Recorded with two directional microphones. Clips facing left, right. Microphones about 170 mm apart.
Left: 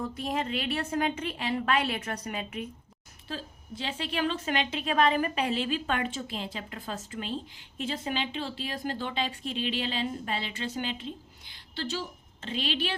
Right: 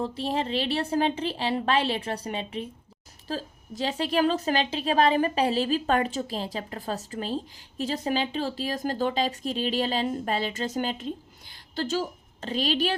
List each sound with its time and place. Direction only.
0.0 s a woman's voice: 30° right (ahead or behind)